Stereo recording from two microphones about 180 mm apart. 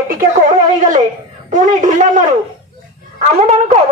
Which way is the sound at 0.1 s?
50° right (ahead or behind).